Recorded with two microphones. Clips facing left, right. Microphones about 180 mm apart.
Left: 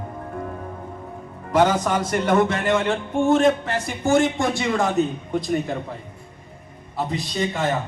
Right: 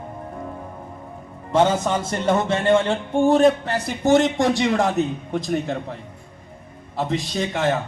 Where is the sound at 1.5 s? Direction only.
25° right (ahead or behind).